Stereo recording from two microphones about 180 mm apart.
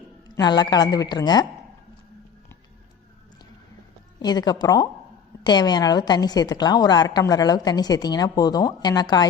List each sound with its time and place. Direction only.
0.3 s a woman's voice: 20° left (ahead or behind)
4.2 s a woman's voice: 25° left (ahead or behind)